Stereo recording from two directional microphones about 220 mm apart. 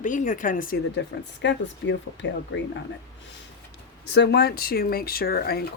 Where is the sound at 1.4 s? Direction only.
55° left (ahead or behind).